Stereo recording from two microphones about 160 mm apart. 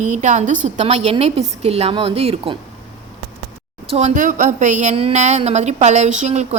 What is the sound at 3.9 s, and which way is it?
A woman's voice, 50° right (ahead or behind).